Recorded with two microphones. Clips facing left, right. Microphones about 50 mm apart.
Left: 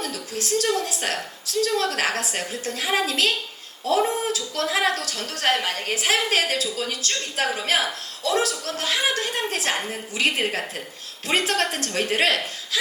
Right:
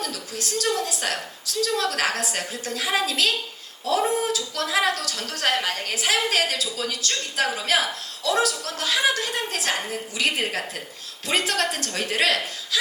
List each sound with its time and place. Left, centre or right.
0.0 s a woman's voice: left
11.3 s a woman's voice: left